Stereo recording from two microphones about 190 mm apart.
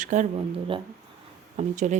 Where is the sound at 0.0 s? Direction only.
40° right (ahead or behind).